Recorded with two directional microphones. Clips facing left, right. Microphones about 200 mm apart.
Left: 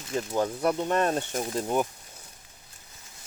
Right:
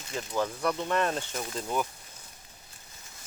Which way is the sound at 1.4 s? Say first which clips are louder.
Left 5 dB; 30° left (ahead or behind).